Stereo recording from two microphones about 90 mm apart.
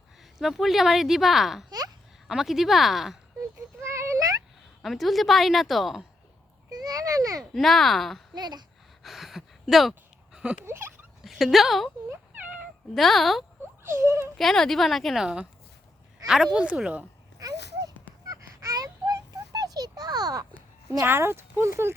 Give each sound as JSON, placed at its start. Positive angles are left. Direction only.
{"t": 0.3, "sound": "a woman's voice", "side_deg": -5}
{"t": 3.8, "sound": "a sound", "side_deg": -30}
{"t": 4.8, "sound": "a woman's voice", "side_deg": 0}
{"t": 6.7, "sound": "a sound", "side_deg": -45}
{"t": 7.5, "sound": "a woman's voice", "side_deg": 0}
{"t": 8.4, "sound": "speech", "side_deg": -50}
{"t": 9.0, "sound": "a sound", "side_deg": 0}
{"t": 11.2, "sound": "speech", "side_deg": 0}
{"t": 12.9, "sound": "a woman's voice", "side_deg": 0}
{"t": 13.8, "sound": "speech", "side_deg": -30}
{"t": 14.3, "sound": "a woman's voice", "side_deg": 5}
{"t": 17.4, "sound": "a sound", "side_deg": -45}
{"t": 21.0, "sound": "speech", "side_deg": -25}